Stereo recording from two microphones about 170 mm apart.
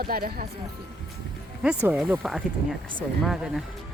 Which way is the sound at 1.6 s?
5° right (ahead or behind).